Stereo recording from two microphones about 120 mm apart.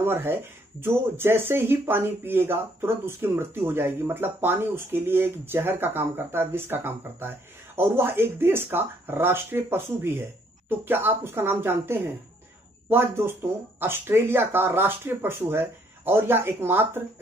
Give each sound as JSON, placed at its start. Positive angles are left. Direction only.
{"t": 0.0, "sound": "speech", "side_deg": -20}